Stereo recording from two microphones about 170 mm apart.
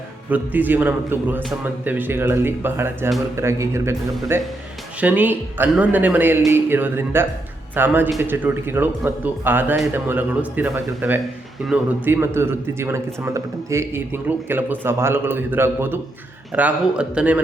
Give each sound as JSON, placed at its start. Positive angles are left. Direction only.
{"t": 0.3, "sound": "speech", "side_deg": -10}